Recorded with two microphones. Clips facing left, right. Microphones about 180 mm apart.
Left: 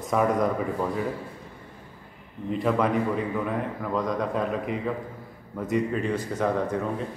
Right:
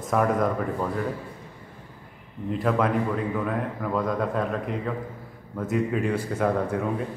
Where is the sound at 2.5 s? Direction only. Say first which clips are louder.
Even; centre (ahead or behind).